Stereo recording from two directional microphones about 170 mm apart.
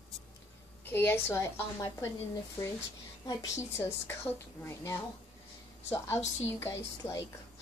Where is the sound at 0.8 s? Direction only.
10° left (ahead or behind).